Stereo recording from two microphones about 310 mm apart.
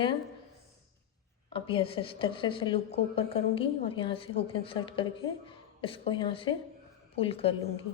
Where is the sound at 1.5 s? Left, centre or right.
Centre.